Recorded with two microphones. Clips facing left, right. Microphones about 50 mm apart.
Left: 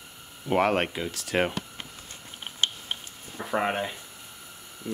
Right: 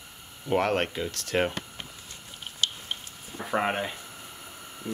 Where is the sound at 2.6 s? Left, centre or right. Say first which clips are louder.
Left 1 dB; left.